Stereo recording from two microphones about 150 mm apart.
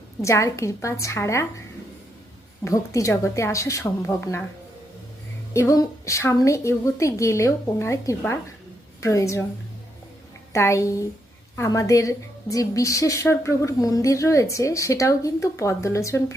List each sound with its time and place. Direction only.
0.2 s a woman's voice: 20° left (ahead or behind)
2.6 s a woman's voice: 20° left (ahead or behind)
5.5 s a woman's voice: 20° left (ahead or behind)
10.5 s a woman's voice: 20° left (ahead or behind)